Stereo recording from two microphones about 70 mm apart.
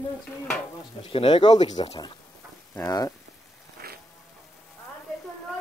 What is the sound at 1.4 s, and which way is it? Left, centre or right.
Speech, left.